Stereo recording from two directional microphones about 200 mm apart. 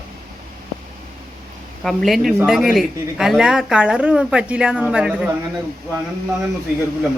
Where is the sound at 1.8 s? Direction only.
Centre (ahead or behind).